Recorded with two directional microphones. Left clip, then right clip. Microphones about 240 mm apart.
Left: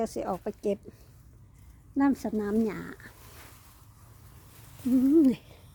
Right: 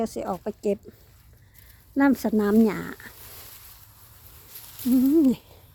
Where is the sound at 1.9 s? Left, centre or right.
Right.